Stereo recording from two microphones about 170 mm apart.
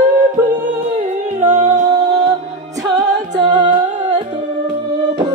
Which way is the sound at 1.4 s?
45° right (ahead or behind).